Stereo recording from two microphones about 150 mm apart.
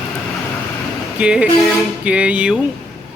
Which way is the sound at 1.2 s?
5° right (ahead or behind).